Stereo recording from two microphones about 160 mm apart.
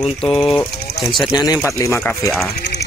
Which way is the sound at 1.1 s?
Centre (ahead or behind).